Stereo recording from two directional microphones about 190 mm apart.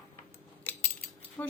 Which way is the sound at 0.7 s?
10° left (ahead or behind).